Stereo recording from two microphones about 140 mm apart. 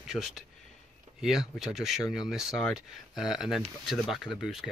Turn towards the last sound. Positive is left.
turn(degrees=0)  # may be behind; listen again after turning